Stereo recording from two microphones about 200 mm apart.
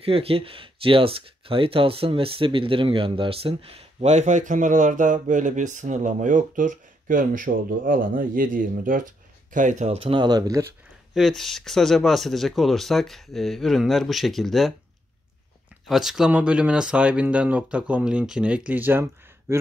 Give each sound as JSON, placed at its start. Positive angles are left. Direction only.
{"t": 0.0, "sound": "speech", "side_deg": -30}
{"t": 11.1, "sound": "speech", "side_deg": 0}
{"t": 15.9, "sound": "speech", "side_deg": 0}